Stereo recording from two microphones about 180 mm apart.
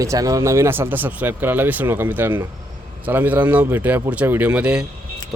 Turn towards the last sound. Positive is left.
turn(degrees=-5)  # may be behind; listen again after turning